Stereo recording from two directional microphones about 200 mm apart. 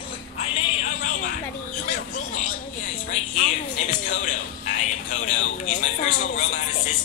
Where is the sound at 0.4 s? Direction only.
35° left (ahead or behind).